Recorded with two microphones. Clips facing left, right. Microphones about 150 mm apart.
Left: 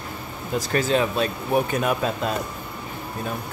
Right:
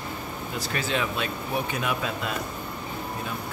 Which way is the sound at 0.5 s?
40° left (ahead or behind).